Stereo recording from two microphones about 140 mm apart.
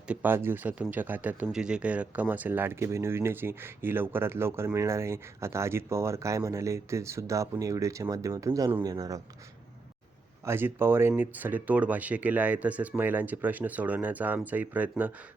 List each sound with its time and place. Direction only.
0.1 s speech: 15° right (ahead or behind)
10.4 s speech: 15° right (ahead or behind)